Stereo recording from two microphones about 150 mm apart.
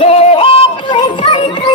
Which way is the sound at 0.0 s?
40° left (ahead or behind).